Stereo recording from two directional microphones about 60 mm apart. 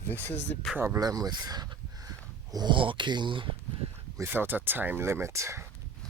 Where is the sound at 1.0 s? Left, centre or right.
Right.